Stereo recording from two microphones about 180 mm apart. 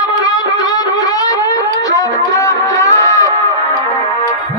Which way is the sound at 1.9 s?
20° left (ahead or behind).